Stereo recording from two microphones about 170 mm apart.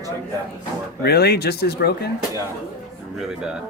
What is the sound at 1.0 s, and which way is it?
Speech, 70° left (ahead or behind).